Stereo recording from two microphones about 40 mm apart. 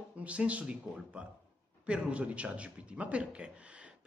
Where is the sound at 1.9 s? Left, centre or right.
Right.